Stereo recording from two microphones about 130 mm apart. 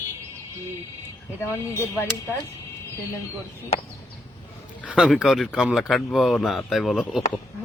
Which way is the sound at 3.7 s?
50° left (ahead or behind).